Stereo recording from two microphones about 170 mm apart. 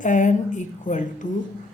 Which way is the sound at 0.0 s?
50° left (ahead or behind).